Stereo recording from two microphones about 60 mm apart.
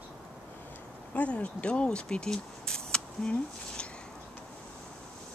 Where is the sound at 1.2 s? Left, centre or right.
Left.